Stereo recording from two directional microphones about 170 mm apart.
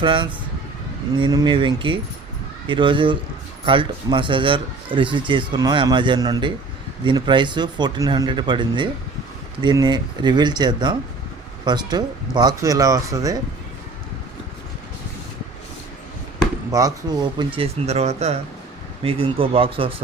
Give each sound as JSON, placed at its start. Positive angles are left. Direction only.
{"t": 0.0, "sound": "speech", "side_deg": -30}
{"t": 16.7, "sound": "speech", "side_deg": -20}